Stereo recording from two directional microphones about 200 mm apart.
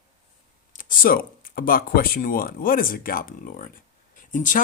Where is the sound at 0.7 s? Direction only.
40° left (ahead or behind).